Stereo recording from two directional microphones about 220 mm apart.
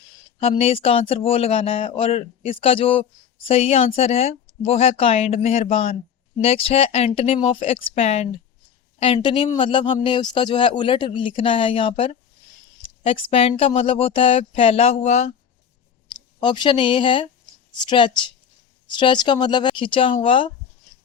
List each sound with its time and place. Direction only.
0.3 s speech: 25° left (ahead or behind)